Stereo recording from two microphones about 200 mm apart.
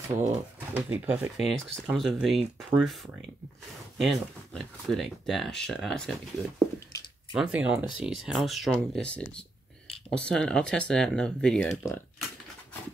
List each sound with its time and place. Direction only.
0.1 s speech: 15° right (ahead or behind)
4.0 s speech: centre (ahead or behind)
7.3 s speech: 5° right (ahead or behind)